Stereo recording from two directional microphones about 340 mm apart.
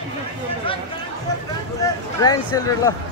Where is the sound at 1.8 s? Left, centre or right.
Centre.